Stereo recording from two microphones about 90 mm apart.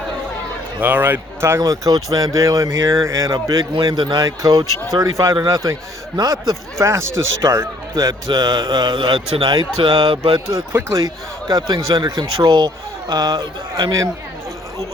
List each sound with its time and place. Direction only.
0.8 s speech: 20° right (ahead or behind)
1.6 s speech: 40° right (ahead or behind)
3.3 s speech: 45° right (ahead or behind)
3.9 s speech: 60° right (ahead or behind)
4.2 s speech: 40° right (ahead or behind); by 9.9 s 90° right
9.9 s speech: 60° right (ahead or behind)
10.7 s speech: 25° right (ahead or behind)
11.4 s speech: 60° right (ahead or behind)